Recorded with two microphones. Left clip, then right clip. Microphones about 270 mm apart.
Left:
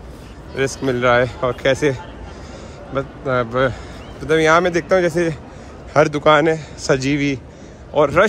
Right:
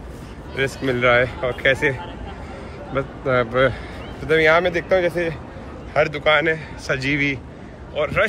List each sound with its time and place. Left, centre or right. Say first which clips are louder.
0.8 s a man's voice: left 1 dB; centre
4.3 s a man's voice: left 2 dB; left